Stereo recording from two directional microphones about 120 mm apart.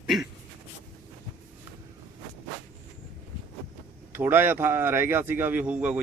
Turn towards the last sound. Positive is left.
turn(degrees=-10)  # may be behind; listen again after turning